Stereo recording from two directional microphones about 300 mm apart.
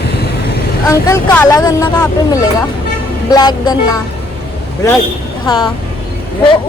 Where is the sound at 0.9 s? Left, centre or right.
Centre.